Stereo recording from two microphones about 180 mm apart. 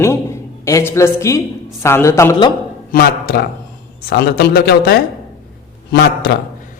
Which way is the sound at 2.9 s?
55° left (ahead or behind).